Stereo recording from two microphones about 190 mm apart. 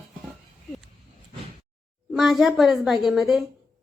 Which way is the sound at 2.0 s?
Centre (ahead or behind).